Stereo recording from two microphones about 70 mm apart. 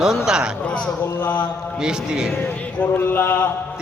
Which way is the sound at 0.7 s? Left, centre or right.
Centre.